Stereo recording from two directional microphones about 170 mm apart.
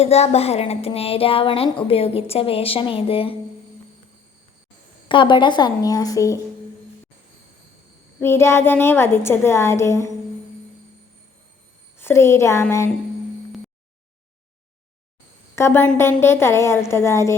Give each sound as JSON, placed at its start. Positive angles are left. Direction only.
{"t": 0.0, "sound": "speech", "side_deg": 40}
{"t": 5.0, "sound": "a woman's voice", "side_deg": 30}
{"t": 8.2, "sound": "a woman's voice", "side_deg": 15}
{"t": 11.9, "sound": "a woman's voice", "side_deg": 15}
{"t": 15.5, "sound": "a woman's voice", "side_deg": 15}